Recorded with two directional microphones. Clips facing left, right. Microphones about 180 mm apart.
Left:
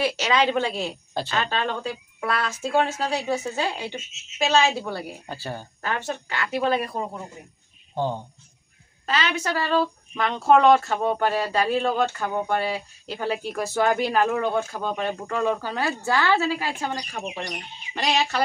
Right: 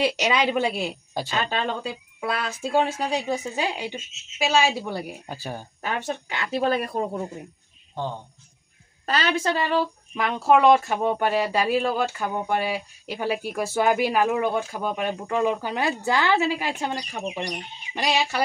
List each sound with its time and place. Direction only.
0.0 s speech: 15° right (ahead or behind)
6.5 s speech: 40° right (ahead or behind)
7.9 s speech: 15° left (ahead or behind)
9.0 s speech: 40° right (ahead or behind); by 18.4 s 10° right (ahead or behind)